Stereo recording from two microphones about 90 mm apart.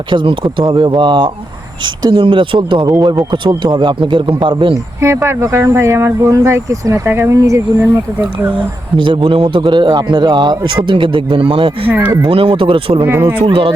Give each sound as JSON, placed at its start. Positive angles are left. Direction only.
{"t": 0.1, "sound": "speech", "side_deg": -65}
{"t": 4.9, "sound": "speech", "side_deg": -30}
{"t": 9.0, "sound": "speech", "side_deg": -75}
{"t": 11.9, "sound": "speech", "side_deg": -20}
{"t": 12.2, "sound": "speech", "side_deg": -85}
{"t": 13.1, "sound": "speech", "side_deg": -25}
{"t": 13.4, "sound": "speech", "side_deg": -85}